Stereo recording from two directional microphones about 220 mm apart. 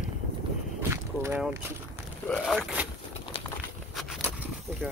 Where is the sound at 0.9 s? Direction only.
10° right (ahead or behind).